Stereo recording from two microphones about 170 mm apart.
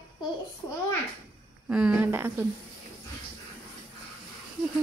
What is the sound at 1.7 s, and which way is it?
Speech, 5° right (ahead or behind).